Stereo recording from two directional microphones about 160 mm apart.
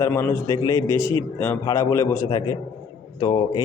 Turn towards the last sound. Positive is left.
turn(degrees=25)  # may be behind; listen again after turning